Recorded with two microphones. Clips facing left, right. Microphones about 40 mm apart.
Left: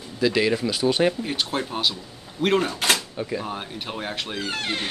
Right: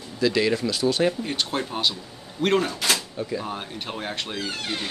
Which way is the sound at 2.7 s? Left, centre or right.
Left.